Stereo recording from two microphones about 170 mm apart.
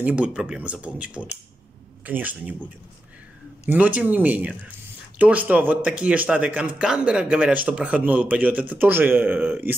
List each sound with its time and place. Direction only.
0.0 s speech: 5° right (ahead or behind)
3.6 s speech: 10° right (ahead or behind)